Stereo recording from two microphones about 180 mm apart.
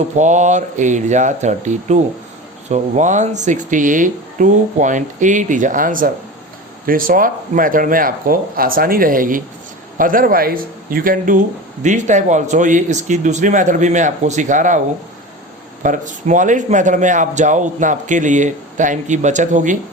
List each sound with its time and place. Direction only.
0.2 s speech: 40° right (ahead or behind)
15.8 s speech: 45° right (ahead or behind)